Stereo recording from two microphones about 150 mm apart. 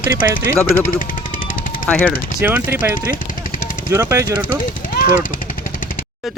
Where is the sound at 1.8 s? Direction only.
10° left (ahead or behind).